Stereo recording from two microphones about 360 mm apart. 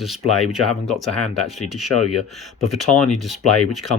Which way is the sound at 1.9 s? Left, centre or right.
Left.